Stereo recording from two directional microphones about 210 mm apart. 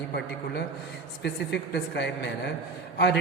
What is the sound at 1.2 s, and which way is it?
A man's voice, 55° left (ahead or behind).